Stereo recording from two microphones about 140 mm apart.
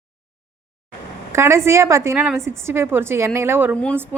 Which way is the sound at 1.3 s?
20° right (ahead or behind).